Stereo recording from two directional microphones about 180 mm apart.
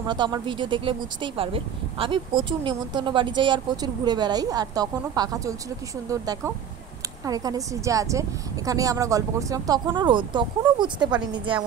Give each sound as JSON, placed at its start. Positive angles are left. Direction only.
{"t": 0.0, "sound": "speech", "side_deg": -25}